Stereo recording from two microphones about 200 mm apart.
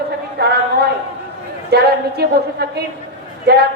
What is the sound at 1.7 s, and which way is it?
A woman's voice, 55° right (ahead or behind).